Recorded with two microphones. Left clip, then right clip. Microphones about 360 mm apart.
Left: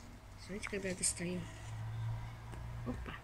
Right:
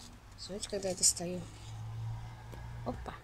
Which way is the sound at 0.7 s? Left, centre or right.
Right.